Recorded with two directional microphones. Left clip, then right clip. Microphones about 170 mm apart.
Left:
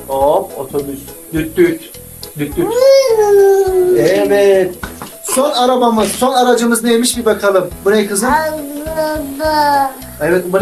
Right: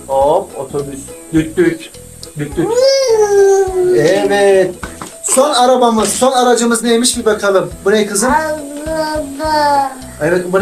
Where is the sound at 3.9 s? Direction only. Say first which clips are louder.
Right 2 dB; 20° right (ahead or behind).